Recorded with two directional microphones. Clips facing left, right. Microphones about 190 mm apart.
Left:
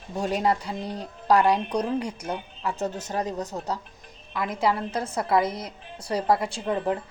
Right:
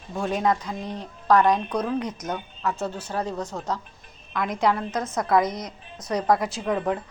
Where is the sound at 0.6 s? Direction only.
35° left (ahead or behind).